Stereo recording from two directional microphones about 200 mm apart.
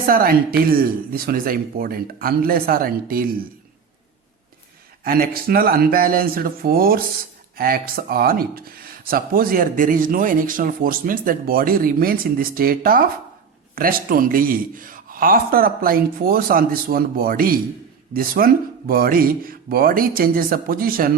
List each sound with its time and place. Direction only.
0.0 s speech: 45° right (ahead or behind)
5.0 s speech: 50° right (ahead or behind)